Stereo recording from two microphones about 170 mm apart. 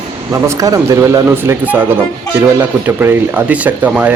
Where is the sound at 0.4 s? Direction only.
20° right (ahead or behind).